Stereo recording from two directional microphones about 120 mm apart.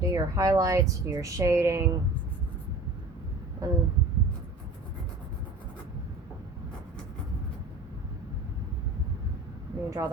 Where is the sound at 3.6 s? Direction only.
25° right (ahead or behind).